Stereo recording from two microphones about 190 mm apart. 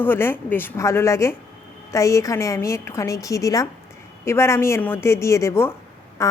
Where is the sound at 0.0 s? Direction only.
10° left (ahead or behind).